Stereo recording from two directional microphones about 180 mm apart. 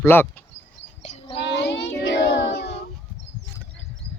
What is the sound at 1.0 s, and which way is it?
Child singing, 35° left (ahead or behind).